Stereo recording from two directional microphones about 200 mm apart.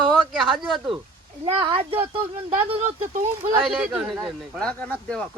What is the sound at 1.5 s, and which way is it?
Speech, 25° right (ahead or behind).